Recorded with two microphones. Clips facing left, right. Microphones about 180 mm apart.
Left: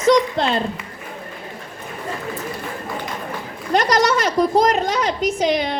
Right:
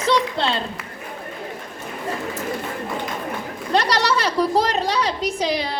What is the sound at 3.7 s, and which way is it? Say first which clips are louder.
A woman's voice: left 3 dB; 30° right (ahead or behind).